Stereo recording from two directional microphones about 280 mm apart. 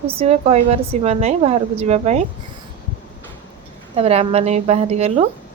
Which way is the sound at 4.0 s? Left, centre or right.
Right.